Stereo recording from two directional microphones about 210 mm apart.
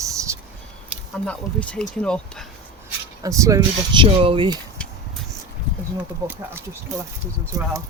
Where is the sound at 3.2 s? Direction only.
15° right (ahead or behind).